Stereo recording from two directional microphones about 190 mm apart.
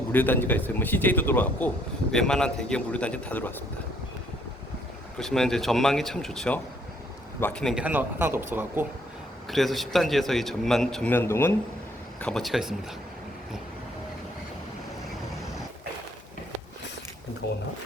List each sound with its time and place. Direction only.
0.1 s a man's voice: 10° left (ahead or behind)
5.1 s a man's voice: 5° left (ahead or behind)
9.5 s a man's voice: centre (ahead or behind)
12.2 s a man's voice: centre (ahead or behind)
17.4 s speech: 60° left (ahead or behind)